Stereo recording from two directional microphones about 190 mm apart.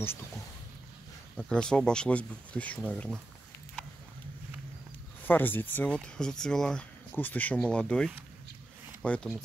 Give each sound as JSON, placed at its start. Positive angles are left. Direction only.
{"t": 1.3, "sound": "speech", "side_deg": 5}
{"t": 5.2, "sound": "speech", "side_deg": 10}